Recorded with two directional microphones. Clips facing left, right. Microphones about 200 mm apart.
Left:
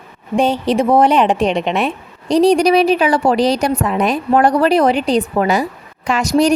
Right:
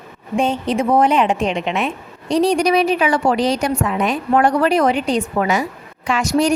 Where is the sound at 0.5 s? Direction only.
80° left.